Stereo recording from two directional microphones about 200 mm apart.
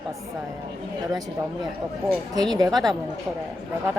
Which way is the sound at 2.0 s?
20° right (ahead or behind).